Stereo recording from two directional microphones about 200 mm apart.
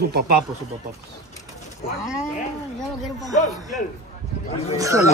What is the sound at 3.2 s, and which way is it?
Speech, 35° left (ahead or behind).